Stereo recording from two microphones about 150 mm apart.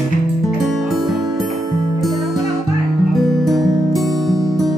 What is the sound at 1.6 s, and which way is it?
Music, 25° right (ahead or behind).